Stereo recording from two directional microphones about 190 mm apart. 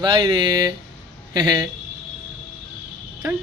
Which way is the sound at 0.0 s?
25° right (ahead or behind).